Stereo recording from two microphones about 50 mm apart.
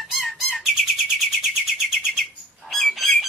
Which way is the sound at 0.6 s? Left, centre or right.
Centre.